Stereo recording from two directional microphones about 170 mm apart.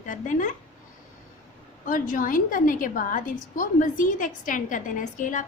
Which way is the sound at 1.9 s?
50° left (ahead or behind).